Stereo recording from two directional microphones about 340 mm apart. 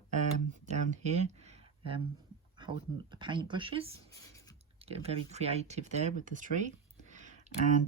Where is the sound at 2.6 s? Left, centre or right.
Centre.